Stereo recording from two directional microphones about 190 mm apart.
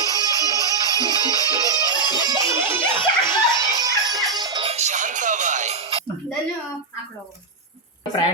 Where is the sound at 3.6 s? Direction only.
20° right (ahead or behind).